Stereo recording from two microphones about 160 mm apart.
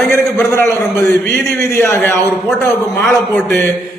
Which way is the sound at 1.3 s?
15° left (ahead or behind).